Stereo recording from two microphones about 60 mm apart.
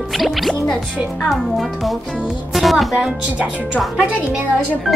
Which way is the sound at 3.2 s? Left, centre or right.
Centre.